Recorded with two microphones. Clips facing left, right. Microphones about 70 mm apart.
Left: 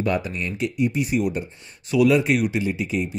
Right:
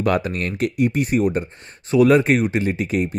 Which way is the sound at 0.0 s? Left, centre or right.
Right.